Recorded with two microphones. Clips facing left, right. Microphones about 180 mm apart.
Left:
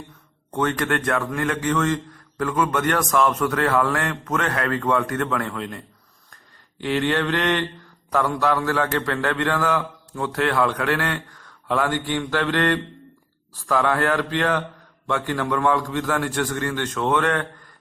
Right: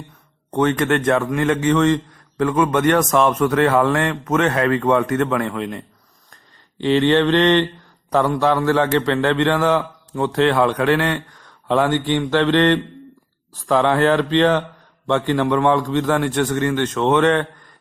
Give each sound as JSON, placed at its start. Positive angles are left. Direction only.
{"t": 0.5, "sound": "a man's voice", "side_deg": -20}